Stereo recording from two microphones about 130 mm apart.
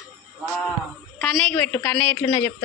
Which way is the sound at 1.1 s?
5° left (ahead or behind).